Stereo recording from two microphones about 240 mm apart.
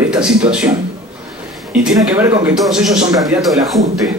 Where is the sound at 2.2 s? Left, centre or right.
Centre.